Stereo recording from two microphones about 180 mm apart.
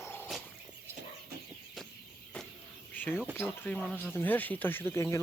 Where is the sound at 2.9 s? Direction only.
10° left (ahead or behind).